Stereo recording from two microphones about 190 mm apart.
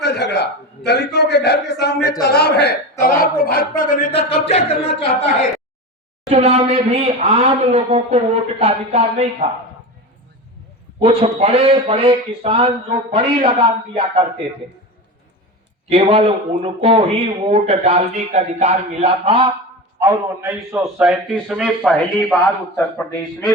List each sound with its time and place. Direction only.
0.0 s a sound: 60° left (ahead or behind)
0.9 s a man's voice: 60° left (ahead or behind)
3.0 s a sound: 50° left (ahead or behind)
4.1 s speech: 30° left (ahead or behind)
6.2 s speech: 35° right (ahead or behind)
11.0 s speech: 30° right (ahead or behind)
15.9 s speech: 30° right (ahead or behind)
20.0 s a man's voice: 10° right (ahead or behind)